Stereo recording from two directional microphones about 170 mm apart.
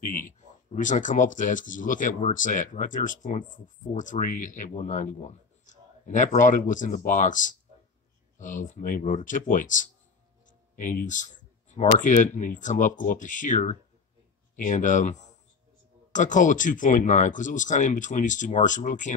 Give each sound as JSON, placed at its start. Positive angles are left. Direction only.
{"t": 0.0, "sound": "speech", "side_deg": 50}